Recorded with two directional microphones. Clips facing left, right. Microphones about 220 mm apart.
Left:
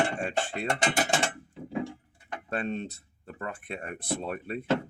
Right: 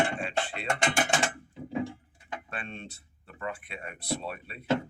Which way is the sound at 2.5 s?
40° left (ahead or behind).